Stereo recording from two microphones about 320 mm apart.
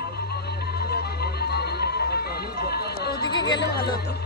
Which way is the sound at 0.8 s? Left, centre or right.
Left.